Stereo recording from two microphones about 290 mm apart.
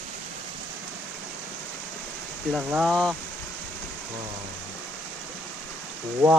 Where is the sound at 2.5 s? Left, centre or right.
Centre.